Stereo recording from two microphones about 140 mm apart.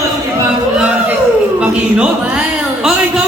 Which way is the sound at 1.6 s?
10° right (ahead or behind).